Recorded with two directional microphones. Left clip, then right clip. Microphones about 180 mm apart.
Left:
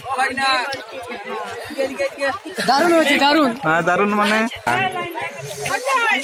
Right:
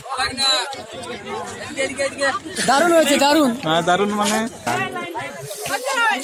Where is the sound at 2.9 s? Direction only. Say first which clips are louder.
Even; 75° right (ahead or behind).